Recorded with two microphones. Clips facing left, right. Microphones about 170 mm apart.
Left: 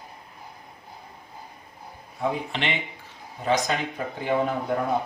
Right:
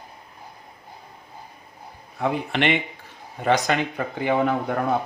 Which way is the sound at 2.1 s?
65° right (ahead or behind).